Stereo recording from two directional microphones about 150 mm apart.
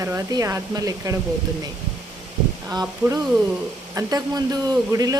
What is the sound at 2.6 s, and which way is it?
Speech, 20° right (ahead or behind).